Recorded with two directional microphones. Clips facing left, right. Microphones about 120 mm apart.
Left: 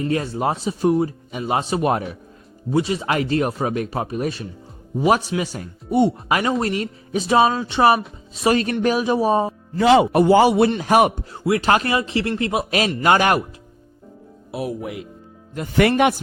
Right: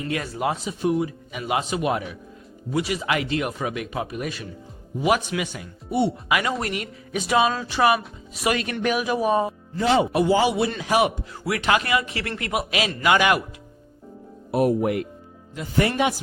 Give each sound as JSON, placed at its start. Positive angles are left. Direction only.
{"t": 0.1, "sound": "speech", "side_deg": 30}
{"t": 2.7, "sound": "speech", "side_deg": 30}
{"t": 6.4, "sound": "speech", "side_deg": 25}
{"t": 9.7, "sound": "speech", "side_deg": 85}
{"t": 10.1, "sound": "a man's voice", "side_deg": 55}
{"t": 11.3, "sound": "speech", "side_deg": 30}
{"t": 13.0, "sound": "speech", "side_deg": 40}
{"t": 14.5, "sound": "speech", "side_deg": -50}
{"t": 15.8, "sound": "a man's voice", "side_deg": 65}